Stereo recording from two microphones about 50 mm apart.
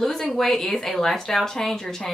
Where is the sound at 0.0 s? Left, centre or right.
Centre.